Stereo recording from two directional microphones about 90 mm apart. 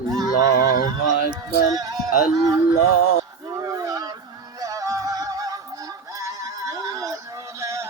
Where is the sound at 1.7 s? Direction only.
45° right (ahead or behind).